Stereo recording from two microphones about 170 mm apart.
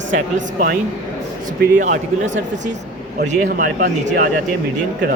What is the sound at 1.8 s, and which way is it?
Speech, 45° right (ahead or behind).